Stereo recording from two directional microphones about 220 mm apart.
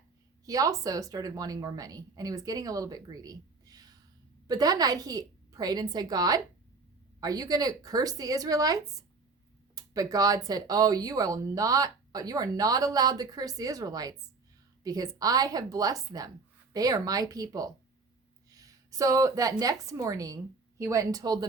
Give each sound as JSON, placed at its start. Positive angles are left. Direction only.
{"t": 0.4, "sound": "a woman's voice", "side_deg": -15}